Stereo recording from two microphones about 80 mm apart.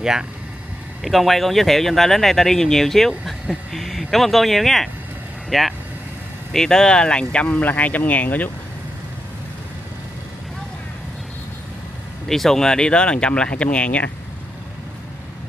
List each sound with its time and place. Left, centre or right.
0.0 s speech: centre
12.3 s speech: centre